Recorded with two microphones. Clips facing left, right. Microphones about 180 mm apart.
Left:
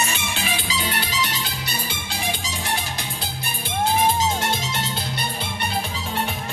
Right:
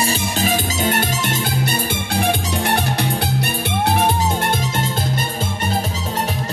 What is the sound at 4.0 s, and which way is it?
Music, 50° right (ahead or behind).